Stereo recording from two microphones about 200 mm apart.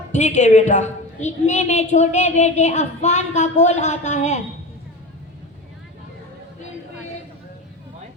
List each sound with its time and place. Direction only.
0.1 s a woman's voice: 35° left (ahead or behind)